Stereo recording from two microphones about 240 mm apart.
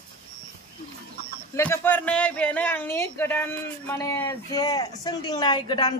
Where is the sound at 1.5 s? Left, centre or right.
Centre.